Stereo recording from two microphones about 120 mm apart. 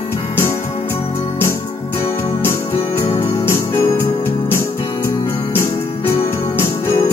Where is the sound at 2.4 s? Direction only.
20° left (ahead or behind).